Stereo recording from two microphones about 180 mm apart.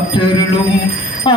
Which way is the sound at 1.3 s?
25° left (ahead or behind).